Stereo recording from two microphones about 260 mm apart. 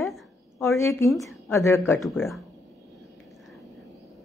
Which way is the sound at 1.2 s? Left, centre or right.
Centre.